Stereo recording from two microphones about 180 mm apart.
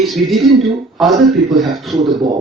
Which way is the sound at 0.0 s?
Centre (ahead or behind).